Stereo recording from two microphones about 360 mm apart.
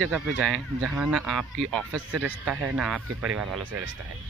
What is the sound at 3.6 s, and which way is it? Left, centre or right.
Speech, right.